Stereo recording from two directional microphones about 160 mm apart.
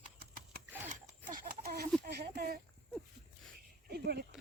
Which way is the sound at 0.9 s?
50° right (ahead or behind).